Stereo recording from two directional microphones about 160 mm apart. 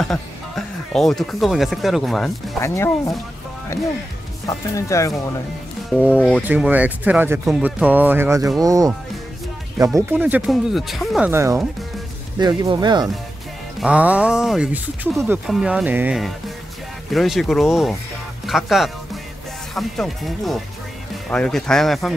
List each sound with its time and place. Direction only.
0.0 s speech: centre (ahead or behind)
2.6 s speech: 20° left (ahead or behind)
5.9 s speech: 10° right (ahead or behind)
9.9 s speech: 10° right (ahead or behind)
11.2 s speech: 15° right (ahead or behind)
13.7 s speech: 5° right (ahead or behind)
17.1 s speech: centre (ahead or behind)